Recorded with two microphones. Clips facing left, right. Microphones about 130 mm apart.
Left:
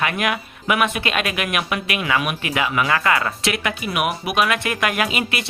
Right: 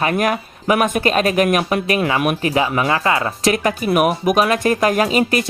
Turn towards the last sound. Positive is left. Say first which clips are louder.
# right 7 dB
turn(degrees=-40)  # may be behind; listen again after turning